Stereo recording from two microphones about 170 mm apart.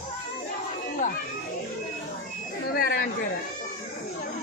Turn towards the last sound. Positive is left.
turn(degrees=60)  # may be behind; listen again after turning